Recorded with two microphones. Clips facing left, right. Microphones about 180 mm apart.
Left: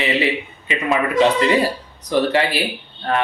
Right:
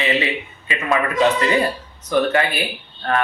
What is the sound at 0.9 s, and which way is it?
Speech, 25° left (ahead or behind).